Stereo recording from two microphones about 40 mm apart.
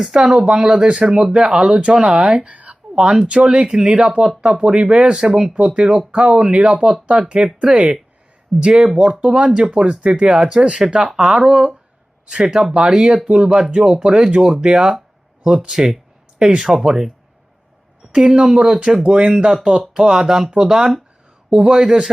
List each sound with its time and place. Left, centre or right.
0.1 s speech: right
2.5 s a sound: right
2.9 s speech: centre
3.2 s speech: right
11.0 s speech: centre
11.4 s speech: right
12.2 s speech: centre
15.7 s speech: centre
16.5 s speech: centre
18.1 s speech: centre